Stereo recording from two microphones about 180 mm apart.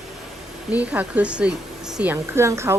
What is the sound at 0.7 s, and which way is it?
Speech, 10° right (ahead or behind).